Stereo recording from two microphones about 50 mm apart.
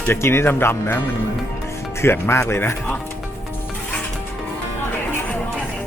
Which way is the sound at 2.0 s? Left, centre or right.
Left.